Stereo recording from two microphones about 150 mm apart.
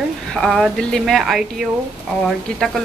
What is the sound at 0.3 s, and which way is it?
Speech, centre (ahead or behind).